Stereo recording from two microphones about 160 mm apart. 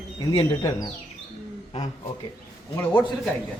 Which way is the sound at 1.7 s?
40° left (ahead or behind).